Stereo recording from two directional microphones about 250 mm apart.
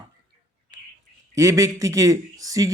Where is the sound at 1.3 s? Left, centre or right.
Centre.